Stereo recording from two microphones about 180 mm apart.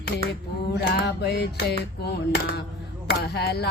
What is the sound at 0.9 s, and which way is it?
Female singing, 65° left (ahead or behind).